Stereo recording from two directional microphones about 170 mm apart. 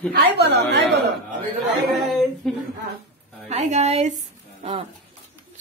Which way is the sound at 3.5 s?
40° right (ahead or behind).